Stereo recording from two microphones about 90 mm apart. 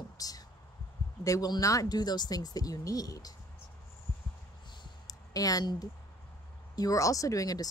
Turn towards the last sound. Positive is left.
turn(degrees=40)  # may be behind; listen again after turning